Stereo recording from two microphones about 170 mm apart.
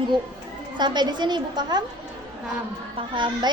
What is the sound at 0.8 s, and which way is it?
A woman's voice, 25° right (ahead or behind).